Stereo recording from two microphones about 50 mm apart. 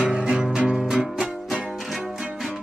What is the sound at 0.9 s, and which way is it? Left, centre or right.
Music, centre.